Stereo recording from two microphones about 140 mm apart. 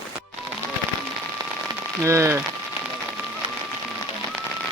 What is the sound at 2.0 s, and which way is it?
Speech, 20° right (ahead or behind).